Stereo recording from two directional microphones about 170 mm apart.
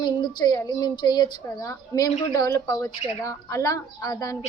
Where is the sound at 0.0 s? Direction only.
25° left (ahead or behind).